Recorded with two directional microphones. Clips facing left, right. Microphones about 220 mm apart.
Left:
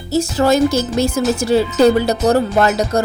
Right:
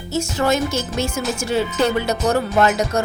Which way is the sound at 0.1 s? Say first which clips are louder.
Left 5 dB; 35° left (ahead or behind).